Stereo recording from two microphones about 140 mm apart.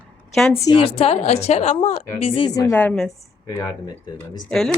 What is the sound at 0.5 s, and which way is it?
Speech, 25° left (ahead or behind).